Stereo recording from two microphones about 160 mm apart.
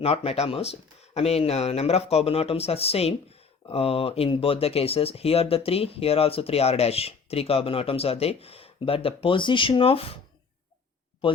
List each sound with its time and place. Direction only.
0.0 s speech: 40° left (ahead or behind)